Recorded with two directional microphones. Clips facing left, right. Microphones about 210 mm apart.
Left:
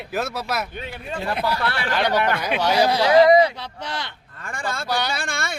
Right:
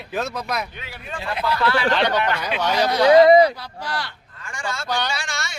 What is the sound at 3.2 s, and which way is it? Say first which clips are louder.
Speech: right 2 dB; 30° right (ahead or behind).